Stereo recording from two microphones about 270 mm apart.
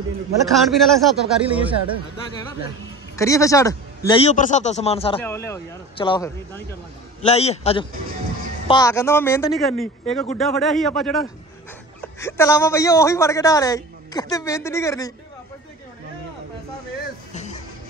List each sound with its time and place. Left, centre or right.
0.5 s speech: centre
3.2 s a man's voice: centre
5.2 s a man's voice: centre
7.2 s a man's voice: left
17.3 s music: left